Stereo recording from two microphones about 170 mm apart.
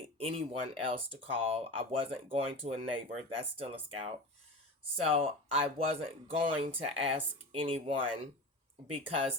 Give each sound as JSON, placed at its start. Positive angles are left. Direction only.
{"t": 0.2, "sound": "speech", "side_deg": -35}